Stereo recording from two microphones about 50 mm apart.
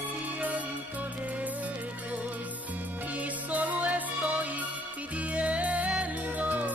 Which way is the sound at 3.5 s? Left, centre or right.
Right.